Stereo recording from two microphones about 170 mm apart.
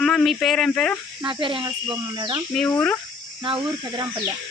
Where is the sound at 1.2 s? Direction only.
30° right (ahead or behind).